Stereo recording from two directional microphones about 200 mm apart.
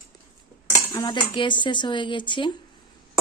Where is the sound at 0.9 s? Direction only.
20° left (ahead or behind).